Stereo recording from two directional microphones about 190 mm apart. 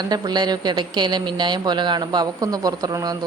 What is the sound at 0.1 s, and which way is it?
Speech, 20° right (ahead or behind).